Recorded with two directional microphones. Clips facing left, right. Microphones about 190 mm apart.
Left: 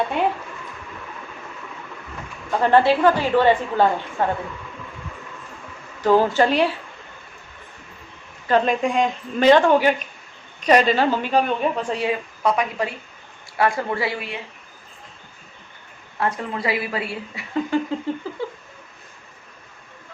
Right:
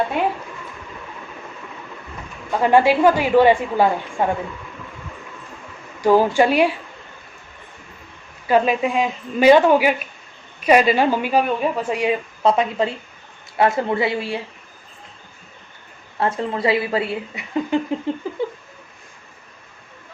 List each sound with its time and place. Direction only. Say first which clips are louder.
2.5 s a woman's voice: right 1 dB; 10° right (ahead or behind)
6.0 s a woman's voice: right 2 dB; 10° right (ahead or behind)
8.4 s a woman's voice: right 2 dB; 10° right (ahead or behind)
12.4 s a woman's voice: right 4 dB; 25° right (ahead or behind)
16.2 s a woman's voice: right 4 dB; 25° right (ahead or behind)